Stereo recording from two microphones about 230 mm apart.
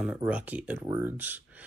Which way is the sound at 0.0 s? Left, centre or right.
Centre.